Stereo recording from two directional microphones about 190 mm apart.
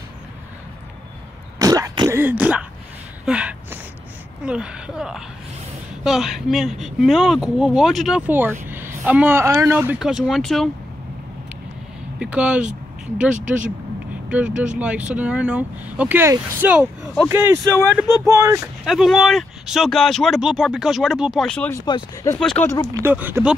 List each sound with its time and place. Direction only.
1.6 s throat clearing: 20° right (ahead or behind)
3.3 s speech: 5° right (ahead or behind)
12.2 s speech: 5° right (ahead or behind)
18.9 s speech: centre (ahead or behind)
21.8 s speech: 25° left (ahead or behind)
22.3 s speech: 5° left (ahead or behind)
22.9 s speech: 10° right (ahead or behind)